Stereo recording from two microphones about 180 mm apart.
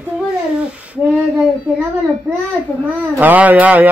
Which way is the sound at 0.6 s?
5° right (ahead or behind).